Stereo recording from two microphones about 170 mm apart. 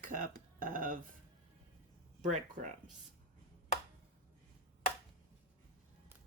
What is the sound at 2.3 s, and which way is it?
Speech, 45° right (ahead or behind).